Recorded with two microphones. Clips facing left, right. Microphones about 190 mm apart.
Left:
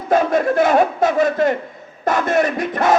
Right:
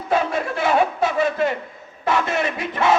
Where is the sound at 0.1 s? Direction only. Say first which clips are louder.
Left 6 dB; 45° left (ahead or behind).